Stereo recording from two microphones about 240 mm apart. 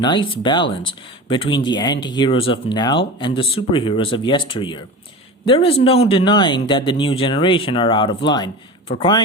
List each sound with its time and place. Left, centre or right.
0.0 s speech: centre